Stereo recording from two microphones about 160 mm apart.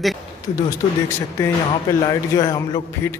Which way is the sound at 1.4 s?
15° left (ahead or behind).